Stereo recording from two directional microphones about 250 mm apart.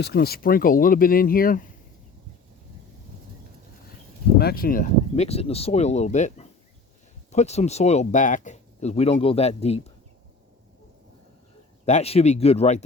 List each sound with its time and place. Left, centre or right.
0.0 s speech: left
4.4 s speech: left
11.9 s speech: left